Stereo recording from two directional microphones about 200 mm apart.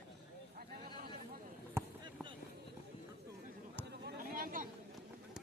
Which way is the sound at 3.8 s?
50° right (ahead or behind).